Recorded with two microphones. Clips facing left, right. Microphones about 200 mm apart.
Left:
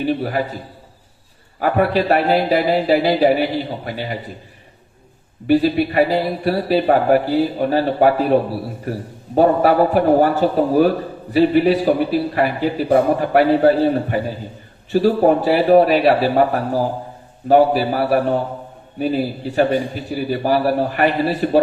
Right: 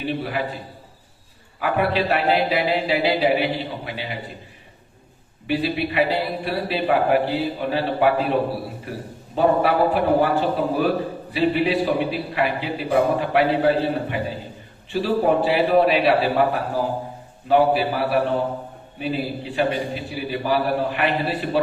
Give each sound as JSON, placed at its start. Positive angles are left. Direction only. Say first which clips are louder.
{"t": 0.0, "sound": "a man's voice", "louder": "left 5 dB", "side_deg": 40}
{"t": 5.5, "sound": "a man's voice", "louder": "left 8 dB", "side_deg": 45}
{"t": 17.5, "sound": "a man's voice", "louder": "left 4 dB", "side_deg": 40}